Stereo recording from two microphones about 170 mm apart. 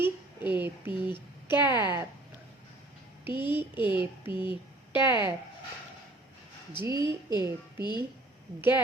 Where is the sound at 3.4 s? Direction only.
10° right (ahead or behind).